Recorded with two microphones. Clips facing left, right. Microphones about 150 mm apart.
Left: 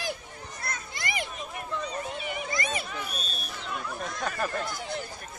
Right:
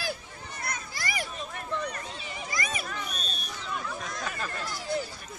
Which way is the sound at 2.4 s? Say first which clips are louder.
Even; 25° left (ahead or behind).